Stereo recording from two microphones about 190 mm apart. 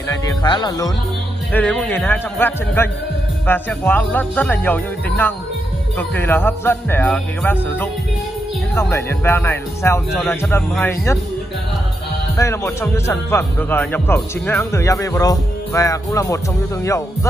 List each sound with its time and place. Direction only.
0.1 s speech: 20° left (ahead or behind)
1.5 s speech: 10° left (ahead or behind)
12.4 s speech: 15° left (ahead or behind)